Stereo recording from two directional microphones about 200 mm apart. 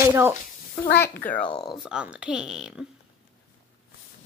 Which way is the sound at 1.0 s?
10° left (ahead or behind).